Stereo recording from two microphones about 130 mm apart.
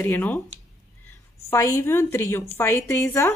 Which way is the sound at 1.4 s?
20° left (ahead or behind).